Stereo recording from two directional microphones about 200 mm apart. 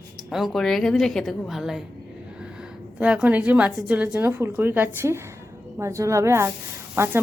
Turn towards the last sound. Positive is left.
turn(degrees=-10)  # may be behind; listen again after turning